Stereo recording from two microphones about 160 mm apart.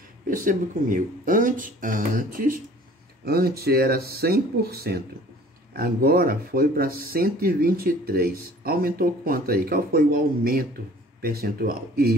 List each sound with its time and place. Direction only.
0.3 s speech: 55° right (ahead or behind)
3.3 s speech: 75° right (ahead or behind)